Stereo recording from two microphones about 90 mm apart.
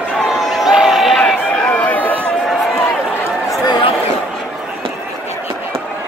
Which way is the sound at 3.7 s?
60° left (ahead or behind).